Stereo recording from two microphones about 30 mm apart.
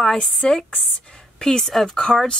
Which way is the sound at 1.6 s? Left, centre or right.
Centre.